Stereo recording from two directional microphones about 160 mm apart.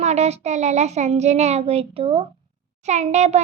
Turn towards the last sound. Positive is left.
turn(degrees=-45)  # may be behind; listen again after turning